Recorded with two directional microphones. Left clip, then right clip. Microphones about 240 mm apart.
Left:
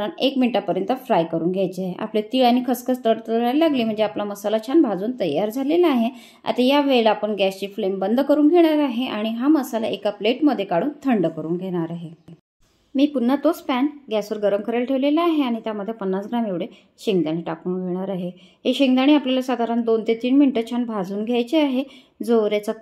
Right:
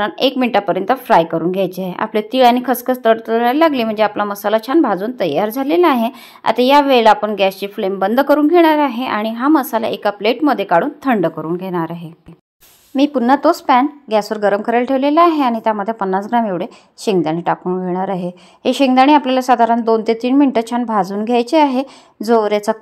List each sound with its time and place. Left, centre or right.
0.0 s a woman's voice: centre
12.9 s a woman's voice: right